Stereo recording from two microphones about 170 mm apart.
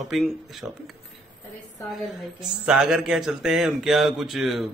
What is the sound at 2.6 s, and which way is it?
A man's voice, 5° right (ahead or behind).